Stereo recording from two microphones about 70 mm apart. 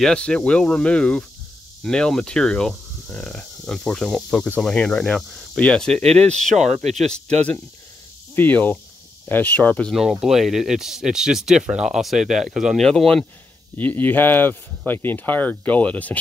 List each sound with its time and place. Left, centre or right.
0.0 s speech: centre
3.1 s speech: centre
5.3 s cricket: centre
5.6 s speech: centre
8.4 s speech: left
10.2 s speech: centre
12.8 s speech: centre
13.7 s speech: left